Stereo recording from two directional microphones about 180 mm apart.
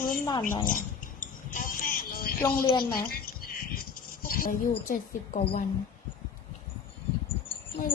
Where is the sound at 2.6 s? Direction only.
25° left (ahead or behind).